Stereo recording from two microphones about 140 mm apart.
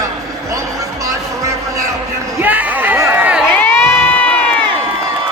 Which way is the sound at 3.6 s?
15° left (ahead or behind).